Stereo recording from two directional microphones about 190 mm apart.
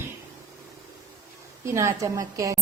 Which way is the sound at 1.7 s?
15° right (ahead or behind).